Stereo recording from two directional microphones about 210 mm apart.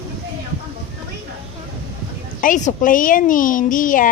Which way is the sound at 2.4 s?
40° left (ahead or behind).